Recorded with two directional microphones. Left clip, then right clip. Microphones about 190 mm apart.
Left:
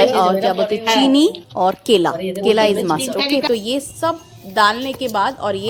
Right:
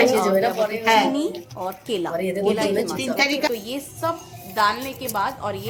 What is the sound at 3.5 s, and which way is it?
A woman's voice, 40° left (ahead or behind).